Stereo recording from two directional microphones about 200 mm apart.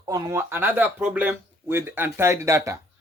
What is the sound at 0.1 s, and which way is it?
Speech, 15° right (ahead or behind).